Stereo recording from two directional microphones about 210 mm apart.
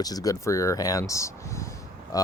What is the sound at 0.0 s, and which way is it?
Speech, 15° left (ahead or behind).